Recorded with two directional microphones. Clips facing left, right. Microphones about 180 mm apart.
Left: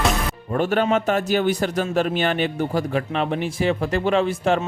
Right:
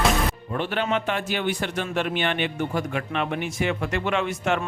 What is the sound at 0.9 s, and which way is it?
Speech, 40° left (ahead or behind).